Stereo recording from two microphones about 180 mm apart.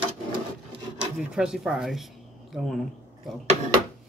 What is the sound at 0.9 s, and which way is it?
Speech, 5° right (ahead or behind).